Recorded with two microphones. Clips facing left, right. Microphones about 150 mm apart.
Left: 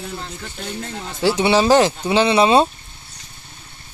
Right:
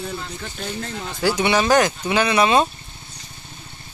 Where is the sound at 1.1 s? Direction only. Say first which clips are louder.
Left 3 dB; 25° left (ahead or behind).